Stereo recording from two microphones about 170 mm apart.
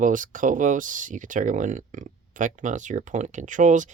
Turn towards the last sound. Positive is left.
turn(degrees=-50)  # may be behind; listen again after turning